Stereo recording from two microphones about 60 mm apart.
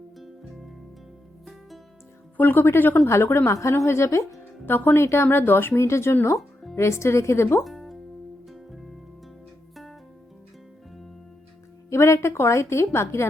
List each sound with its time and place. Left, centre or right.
2.4 s speech: left
3.1 s a woman's voice: left
4.6 s speech: left
5.7 s a woman's voice: left
7.6 s music: centre
11.9 s a woman's voice: left